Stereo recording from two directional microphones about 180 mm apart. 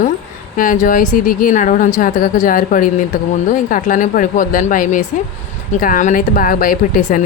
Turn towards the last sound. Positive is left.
turn(degrees=50)  # may be behind; listen again after turning